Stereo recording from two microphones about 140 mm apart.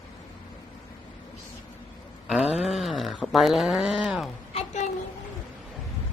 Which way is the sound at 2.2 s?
5° right (ahead or behind).